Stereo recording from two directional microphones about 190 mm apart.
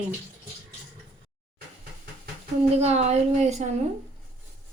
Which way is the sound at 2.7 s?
35° right (ahead or behind).